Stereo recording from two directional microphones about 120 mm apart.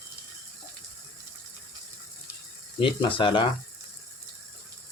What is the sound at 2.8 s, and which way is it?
Speech, 45° left (ahead or behind).